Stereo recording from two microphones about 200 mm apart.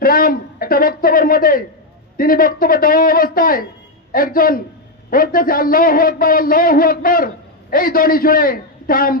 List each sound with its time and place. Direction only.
0.0 s a man's voice: 45° left (ahead or behind)